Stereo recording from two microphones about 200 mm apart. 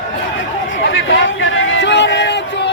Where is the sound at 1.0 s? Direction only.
70° left (ahead or behind).